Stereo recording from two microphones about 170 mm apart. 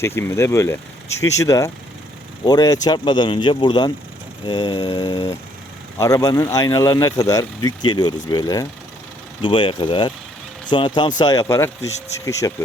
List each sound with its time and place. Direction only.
0.0 s speech: 15° left (ahead or behind)